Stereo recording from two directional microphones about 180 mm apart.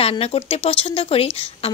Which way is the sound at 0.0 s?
35° left (ahead or behind).